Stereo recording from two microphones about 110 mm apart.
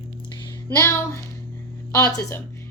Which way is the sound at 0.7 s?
25° left (ahead or behind).